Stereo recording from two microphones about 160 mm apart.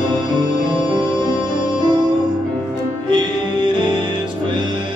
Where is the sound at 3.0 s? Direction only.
30° right (ahead or behind).